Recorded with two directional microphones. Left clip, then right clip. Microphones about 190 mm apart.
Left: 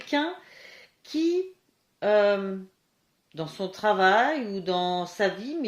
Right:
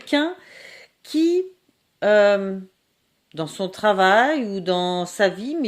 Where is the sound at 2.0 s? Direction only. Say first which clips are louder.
Right 6 dB; 60° right (ahead or behind).